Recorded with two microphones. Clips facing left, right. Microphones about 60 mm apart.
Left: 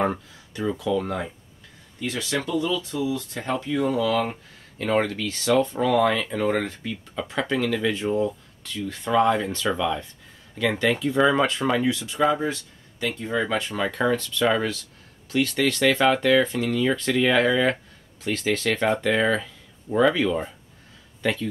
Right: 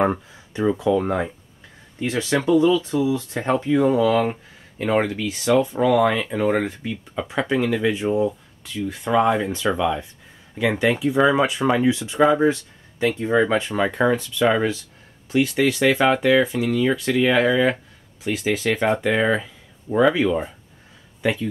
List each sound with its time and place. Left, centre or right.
0.0 s speech: centre